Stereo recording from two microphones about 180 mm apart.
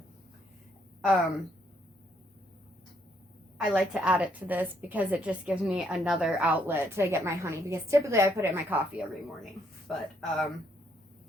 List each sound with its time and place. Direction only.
1.0 s speech: centre (ahead or behind)
3.6 s a woman's voice: 5° right (ahead or behind)
6.7 s a woman's voice: 15° right (ahead or behind)
9.0 s speech: centre (ahead or behind)